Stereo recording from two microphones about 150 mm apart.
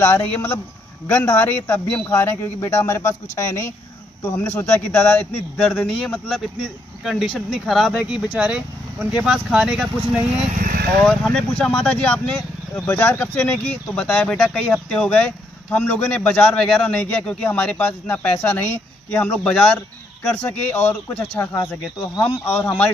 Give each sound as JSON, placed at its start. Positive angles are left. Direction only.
{"t": 0.0, "sound": "a man's voice", "side_deg": 10}
{"t": 10.5, "sound": "speech", "side_deg": -70}
{"t": 11.0, "sound": "a man's voice", "side_deg": 5}
{"t": 22.6, "sound": "speech", "side_deg": 15}